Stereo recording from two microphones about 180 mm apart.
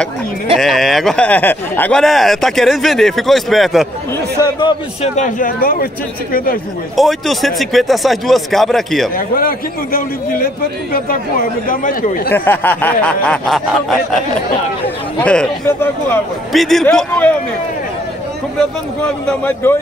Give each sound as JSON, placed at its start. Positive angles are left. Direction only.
{"t": 0.6, "sound": "speech", "side_deg": 0}
{"t": 4.4, "sound": "a man's voice", "side_deg": 25}
{"t": 5.0, "sound": "a man's voice", "side_deg": 40}
{"t": 7.0, "sound": "speech", "side_deg": 0}
{"t": 9.1, "sound": "a man's voice", "side_deg": 55}
{"t": 12.3, "sound": "speech", "side_deg": 10}
{"t": 15.2, "sound": "speech", "side_deg": 10}
{"t": 18.6, "sound": "speech", "side_deg": 5}